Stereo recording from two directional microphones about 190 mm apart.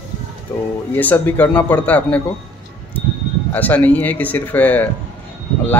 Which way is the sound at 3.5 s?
10° left (ahead or behind).